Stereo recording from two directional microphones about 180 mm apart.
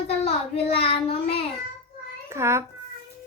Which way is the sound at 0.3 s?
35° left (ahead or behind).